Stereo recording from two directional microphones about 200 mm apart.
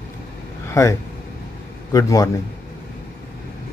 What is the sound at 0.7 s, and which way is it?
Vehicle, 15° left (ahead or behind).